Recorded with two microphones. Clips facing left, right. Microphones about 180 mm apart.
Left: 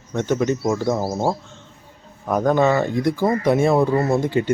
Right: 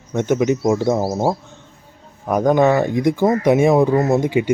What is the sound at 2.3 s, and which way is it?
Speech, 15° right (ahead or behind).